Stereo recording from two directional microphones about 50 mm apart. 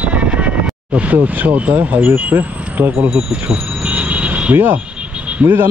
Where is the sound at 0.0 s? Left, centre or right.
Right.